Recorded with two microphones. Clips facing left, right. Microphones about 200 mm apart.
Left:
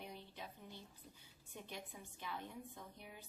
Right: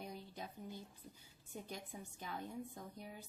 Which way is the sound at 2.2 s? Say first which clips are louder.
Right 3 dB; 40° right (ahead or behind).